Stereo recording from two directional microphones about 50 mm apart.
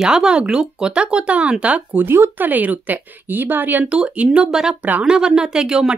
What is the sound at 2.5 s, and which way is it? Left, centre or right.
Speech, right.